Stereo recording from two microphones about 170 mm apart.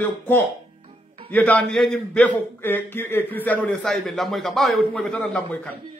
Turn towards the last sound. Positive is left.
turn(degrees=5)  # may be behind; listen again after turning